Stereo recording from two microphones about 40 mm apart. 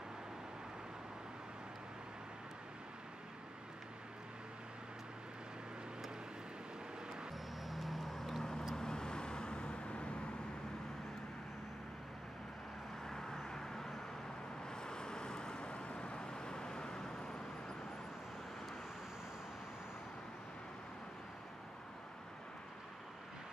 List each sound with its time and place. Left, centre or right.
7.6 s vehicle: centre
8.7 s vehicle: centre
13.0 s vehicle: centre